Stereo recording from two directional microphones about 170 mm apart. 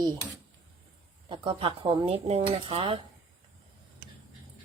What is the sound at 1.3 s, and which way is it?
Speech, 30° right (ahead or behind).